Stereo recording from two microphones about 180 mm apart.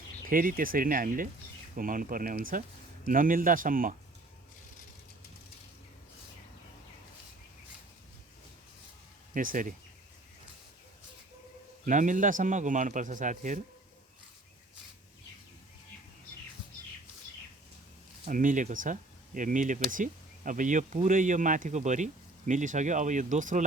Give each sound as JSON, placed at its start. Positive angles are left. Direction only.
{"t": 0.3, "sound": "speech", "side_deg": -50}
{"t": 9.3, "sound": "speech", "side_deg": -50}
{"t": 11.9, "sound": "speech", "side_deg": -45}
{"t": 18.3, "sound": "speech", "side_deg": -45}